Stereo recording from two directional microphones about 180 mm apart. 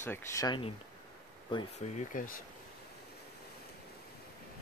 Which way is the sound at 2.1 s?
50° left (ahead or behind).